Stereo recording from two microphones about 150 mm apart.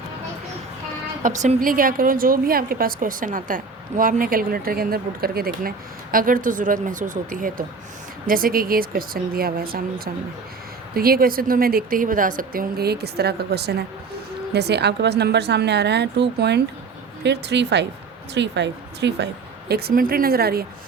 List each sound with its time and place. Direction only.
1.4 s a woman's voice: 60° right (ahead or behind)
12.4 s a woman's voice: 80° right
19.6 s a woman's voice: 90° right